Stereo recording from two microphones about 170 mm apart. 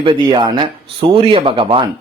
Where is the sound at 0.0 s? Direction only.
30° right (ahead or behind).